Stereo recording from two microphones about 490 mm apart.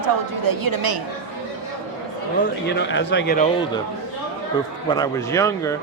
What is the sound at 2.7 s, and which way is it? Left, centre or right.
Speech, left.